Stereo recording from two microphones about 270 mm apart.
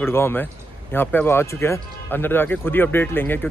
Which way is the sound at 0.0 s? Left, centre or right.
Centre.